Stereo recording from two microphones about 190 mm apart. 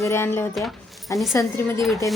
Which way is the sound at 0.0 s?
15° left (ahead or behind).